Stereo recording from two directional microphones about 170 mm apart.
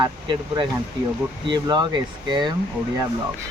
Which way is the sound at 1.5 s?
25° right (ahead or behind).